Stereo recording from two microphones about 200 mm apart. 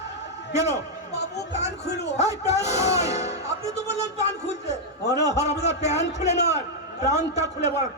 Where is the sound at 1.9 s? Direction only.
55° left (ahead or behind).